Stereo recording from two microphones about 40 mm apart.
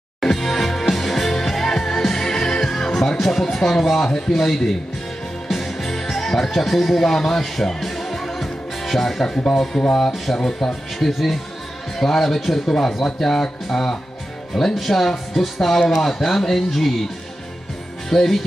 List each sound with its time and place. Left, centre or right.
0.2 s music: centre
3.2 s speech: centre
5.5 s music: centre
10.3 s speech: centre
11.0 s speech: centre
12.6 s speech: centre
18.1 s speech: centre